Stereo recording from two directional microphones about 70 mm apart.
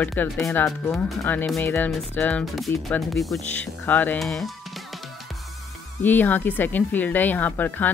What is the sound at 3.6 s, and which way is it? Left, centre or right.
Speech, left.